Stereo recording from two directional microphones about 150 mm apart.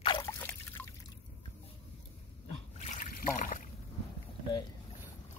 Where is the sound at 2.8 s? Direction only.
55° left (ahead or behind).